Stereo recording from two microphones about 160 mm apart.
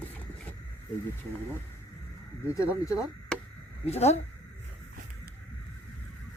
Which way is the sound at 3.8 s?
40° left (ahead or behind).